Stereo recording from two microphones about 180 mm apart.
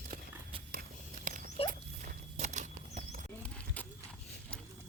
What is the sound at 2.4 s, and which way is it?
Bird flight, 40° right (ahead or behind).